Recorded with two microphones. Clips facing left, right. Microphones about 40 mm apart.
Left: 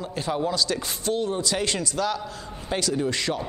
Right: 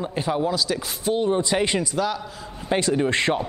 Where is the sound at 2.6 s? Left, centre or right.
Right.